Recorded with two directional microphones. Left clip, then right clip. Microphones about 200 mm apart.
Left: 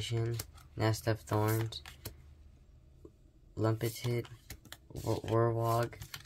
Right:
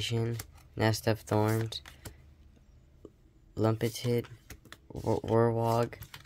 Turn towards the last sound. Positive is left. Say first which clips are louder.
# right 4 dB
turn(degrees=-40)  # may be behind; listen again after turning